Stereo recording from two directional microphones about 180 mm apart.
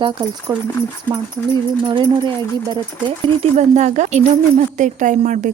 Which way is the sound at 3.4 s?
40° right (ahead or behind).